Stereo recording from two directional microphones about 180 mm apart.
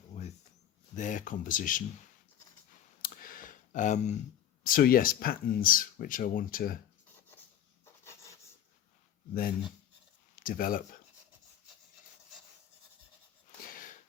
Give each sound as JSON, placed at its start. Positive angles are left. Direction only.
{"t": 0.1, "sound": "a sound", "side_deg": 40}
{"t": 0.9, "sound": "speech", "side_deg": 45}
{"t": 3.0, "sound": "clicking", "side_deg": 50}
{"t": 4.6, "sound": "speech", "side_deg": 50}
{"t": 8.0, "sound": "writing", "side_deg": 15}
{"t": 10.3, "sound": "speech", "side_deg": 50}